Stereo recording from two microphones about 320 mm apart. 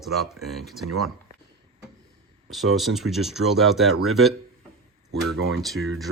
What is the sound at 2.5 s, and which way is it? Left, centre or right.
Speech, centre.